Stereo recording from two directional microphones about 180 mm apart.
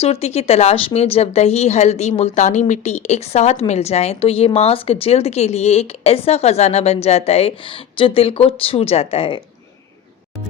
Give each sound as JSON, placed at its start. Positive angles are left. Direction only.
{"t": 0.0, "sound": "speech", "side_deg": 35}